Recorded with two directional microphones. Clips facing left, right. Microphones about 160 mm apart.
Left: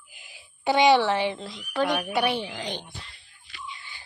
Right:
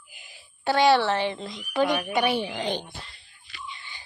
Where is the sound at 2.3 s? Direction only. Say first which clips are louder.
Right 3 dB; 15° right (ahead or behind).